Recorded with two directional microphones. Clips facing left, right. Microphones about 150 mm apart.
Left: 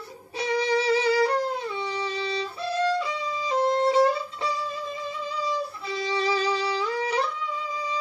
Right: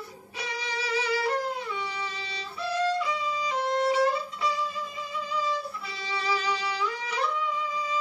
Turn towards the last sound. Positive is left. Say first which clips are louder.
# left 5 dB
turn(degrees=30)  # may be behind; listen again after turning